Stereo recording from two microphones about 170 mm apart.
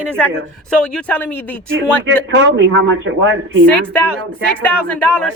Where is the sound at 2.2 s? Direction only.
90° right.